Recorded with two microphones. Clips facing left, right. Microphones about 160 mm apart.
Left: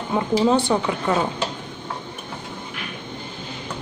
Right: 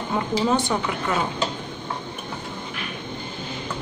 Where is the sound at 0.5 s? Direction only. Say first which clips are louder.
Left 3 dB; 25° left (ahead or behind).